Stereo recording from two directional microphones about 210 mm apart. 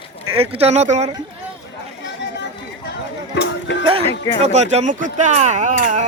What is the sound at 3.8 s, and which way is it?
Speech, 25° right (ahead or behind).